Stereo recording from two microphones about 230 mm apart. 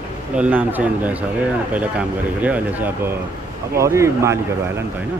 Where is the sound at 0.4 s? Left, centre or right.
Centre.